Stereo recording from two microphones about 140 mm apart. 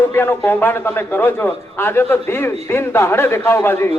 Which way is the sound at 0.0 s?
15° left (ahead or behind).